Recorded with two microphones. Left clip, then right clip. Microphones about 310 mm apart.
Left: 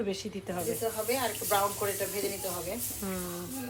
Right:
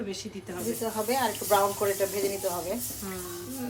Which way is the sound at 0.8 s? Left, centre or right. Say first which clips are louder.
Right 5 dB; right.